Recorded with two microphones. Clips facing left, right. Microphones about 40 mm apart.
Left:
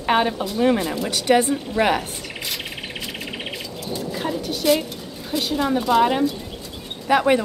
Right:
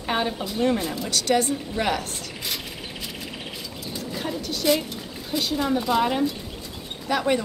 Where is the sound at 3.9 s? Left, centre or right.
Centre.